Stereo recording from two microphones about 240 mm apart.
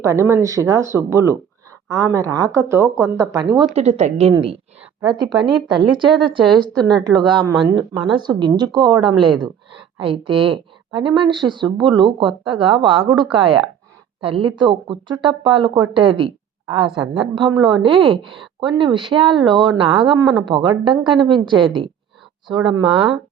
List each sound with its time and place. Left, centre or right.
0.0 s speech: centre
3.8 s speech: right